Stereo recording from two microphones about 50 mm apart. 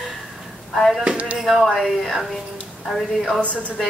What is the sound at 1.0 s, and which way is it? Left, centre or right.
Speech, right.